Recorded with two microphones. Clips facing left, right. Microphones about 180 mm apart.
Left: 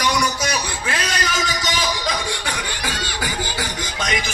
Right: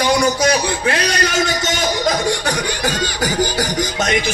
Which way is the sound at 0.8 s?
40° right (ahead or behind).